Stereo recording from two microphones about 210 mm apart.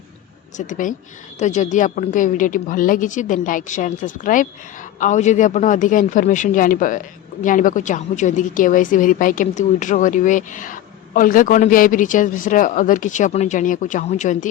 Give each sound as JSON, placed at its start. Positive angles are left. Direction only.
{"t": 0.5, "sound": "a woman's voice", "side_deg": 40}